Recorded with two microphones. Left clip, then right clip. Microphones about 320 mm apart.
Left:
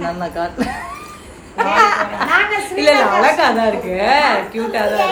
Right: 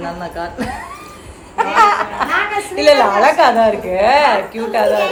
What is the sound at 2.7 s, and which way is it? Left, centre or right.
A woman's voice, centre.